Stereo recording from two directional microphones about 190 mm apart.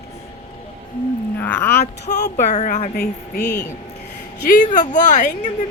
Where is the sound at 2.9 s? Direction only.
60° left (ahead or behind).